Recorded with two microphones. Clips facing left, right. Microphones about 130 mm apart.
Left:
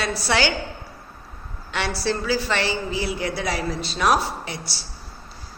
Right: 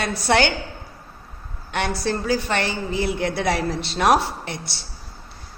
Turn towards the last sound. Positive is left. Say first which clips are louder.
# even
turn(degrees=-60)  # may be behind; listen again after turning